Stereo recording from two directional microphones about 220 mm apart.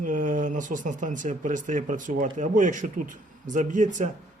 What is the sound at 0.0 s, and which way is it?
Speech, 35° right (ahead or behind).